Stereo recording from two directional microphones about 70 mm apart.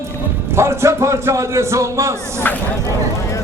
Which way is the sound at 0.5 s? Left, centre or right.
Right.